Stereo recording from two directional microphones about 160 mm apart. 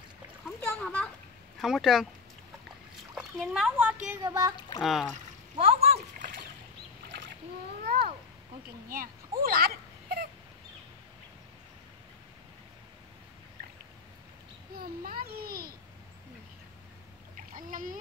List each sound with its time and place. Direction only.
0.7 s a child's voice: 5° left (ahead or behind)
3.2 s a child's voice: centre (ahead or behind)
3.7 s a woman's voice: 10° right (ahead or behind)
4.6 s speech: 25° left (ahead or behind)
4.8 s speech: centre (ahead or behind)
5.6 s speech: 40° right (ahead or behind)
6.1 s splash: 60° right (ahead or behind)
8.8 s a sound: 60° right (ahead or behind)
14.8 s a child's voice: 65° right (ahead or behind)
17.6 s splash: 55° right (ahead or behind)